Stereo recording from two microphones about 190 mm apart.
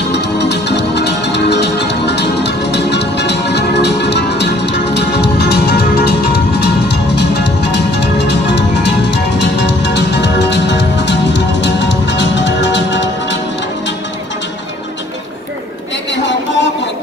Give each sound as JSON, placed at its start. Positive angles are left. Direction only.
{"t": 0.1, "sound": "music", "side_deg": 65}
{"t": 16.1, "sound": "music", "side_deg": 70}